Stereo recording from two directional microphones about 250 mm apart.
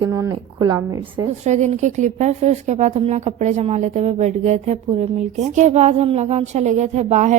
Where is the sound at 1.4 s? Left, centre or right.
Right.